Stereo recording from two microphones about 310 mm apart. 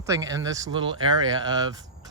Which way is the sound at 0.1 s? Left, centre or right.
Centre.